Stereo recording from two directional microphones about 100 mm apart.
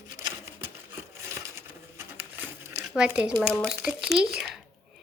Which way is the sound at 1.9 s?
25° right (ahead or behind).